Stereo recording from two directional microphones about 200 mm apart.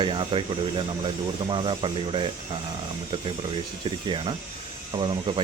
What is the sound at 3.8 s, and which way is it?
Speech, 25° right (ahead or behind).